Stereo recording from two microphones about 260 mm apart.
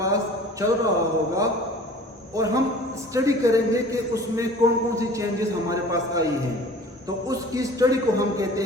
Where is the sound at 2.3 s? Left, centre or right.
Centre.